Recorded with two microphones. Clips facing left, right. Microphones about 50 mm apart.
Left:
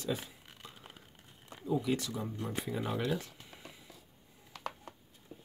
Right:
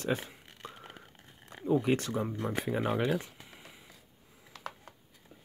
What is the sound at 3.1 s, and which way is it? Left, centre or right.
Speech, right.